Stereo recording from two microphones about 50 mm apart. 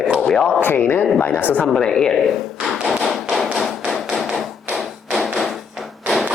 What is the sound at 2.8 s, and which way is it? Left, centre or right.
Tap, centre.